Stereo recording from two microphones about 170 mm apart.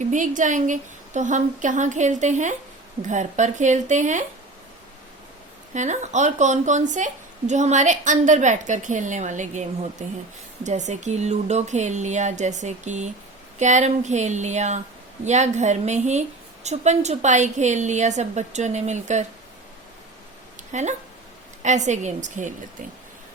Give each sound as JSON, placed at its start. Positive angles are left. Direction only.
{"t": 0.1, "sound": "a woman's voice", "side_deg": -50}
{"t": 5.7, "sound": "a woman's voice", "side_deg": -45}
{"t": 20.7, "sound": "a woman's voice", "side_deg": -45}